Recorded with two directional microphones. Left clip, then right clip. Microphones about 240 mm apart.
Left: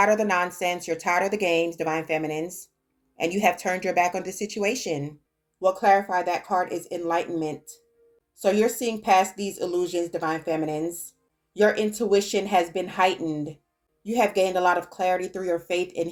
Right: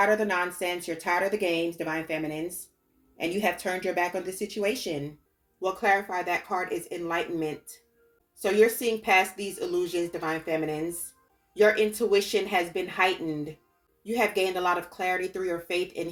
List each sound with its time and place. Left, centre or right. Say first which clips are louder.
0.0 s speech: left 3 dB; left